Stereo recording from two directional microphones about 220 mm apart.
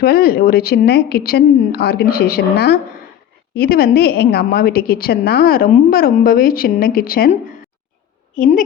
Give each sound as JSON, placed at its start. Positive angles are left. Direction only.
{"t": 0.0, "sound": "a woman's voice", "side_deg": 45}
{"t": 8.4, "sound": "a woman's voice", "side_deg": 35}